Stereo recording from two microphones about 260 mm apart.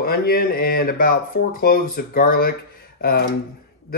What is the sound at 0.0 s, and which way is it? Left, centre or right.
Speech, left.